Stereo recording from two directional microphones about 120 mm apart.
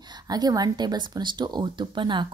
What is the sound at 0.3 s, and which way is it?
A woman's voice, 35° right (ahead or behind).